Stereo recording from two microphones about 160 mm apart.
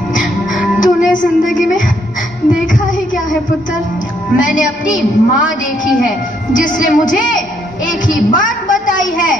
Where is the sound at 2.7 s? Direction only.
55° left (ahead or behind).